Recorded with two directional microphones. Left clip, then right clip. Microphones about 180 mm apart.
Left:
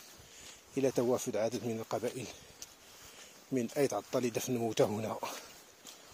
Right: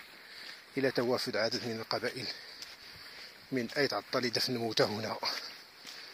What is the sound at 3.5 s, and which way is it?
Speech, 35° left (ahead or behind).